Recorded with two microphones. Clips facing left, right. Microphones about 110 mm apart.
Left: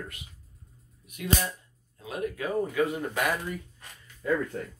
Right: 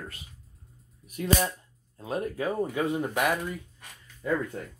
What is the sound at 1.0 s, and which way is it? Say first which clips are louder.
Speech: right 3 dB; 35° right (ahead or behind).